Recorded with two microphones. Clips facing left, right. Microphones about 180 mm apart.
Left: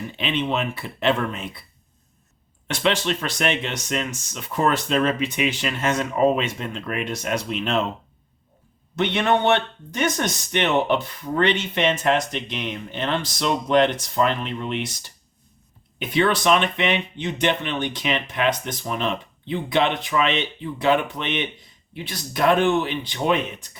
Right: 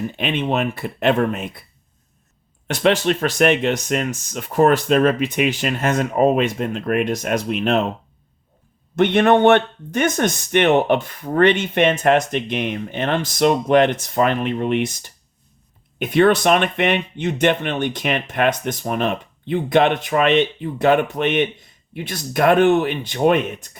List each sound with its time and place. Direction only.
0.2 s speech: 50° right (ahead or behind)
2.8 s speech: 45° right (ahead or behind)
9.0 s speech: 50° right (ahead or behind)